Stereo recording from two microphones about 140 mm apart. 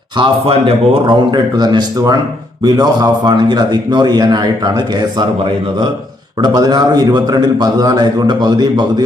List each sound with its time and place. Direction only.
0.2 s a man's voice: 40° right (ahead or behind)
6.4 s a man's voice: 30° right (ahead or behind)